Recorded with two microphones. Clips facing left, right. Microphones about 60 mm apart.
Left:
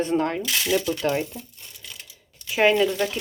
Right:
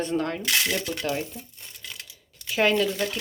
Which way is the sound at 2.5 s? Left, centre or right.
Centre.